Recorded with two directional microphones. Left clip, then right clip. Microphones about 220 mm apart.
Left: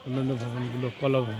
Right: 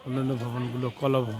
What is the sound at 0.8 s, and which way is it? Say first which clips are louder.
Speech: even; 5° right (ahead or behind).